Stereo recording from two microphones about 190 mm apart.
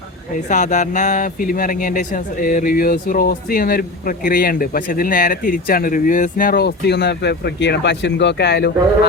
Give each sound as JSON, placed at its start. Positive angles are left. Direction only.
{"t": 0.4, "sound": "speech", "side_deg": 40}